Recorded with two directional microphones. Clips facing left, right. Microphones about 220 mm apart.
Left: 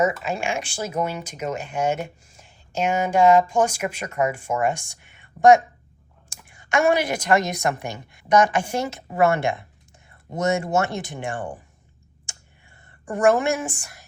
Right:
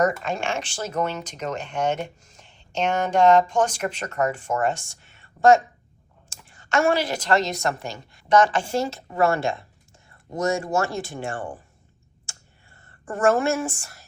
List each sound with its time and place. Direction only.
0.0 s a woman's voice: 5° left (ahead or behind)
12.3 s clicking: 15° left (ahead or behind)
13.1 s speech: 15° left (ahead or behind)